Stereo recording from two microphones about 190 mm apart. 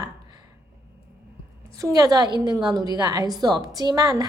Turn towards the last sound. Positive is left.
turn(degrees=-20)  # may be behind; listen again after turning